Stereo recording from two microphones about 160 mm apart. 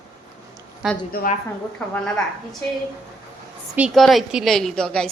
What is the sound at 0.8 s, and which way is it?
Speech, 5° right (ahead or behind).